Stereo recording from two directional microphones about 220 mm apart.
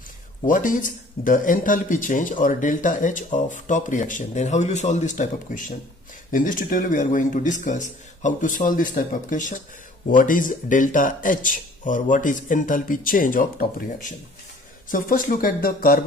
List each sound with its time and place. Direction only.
0.5 s speech: 35° left (ahead or behind)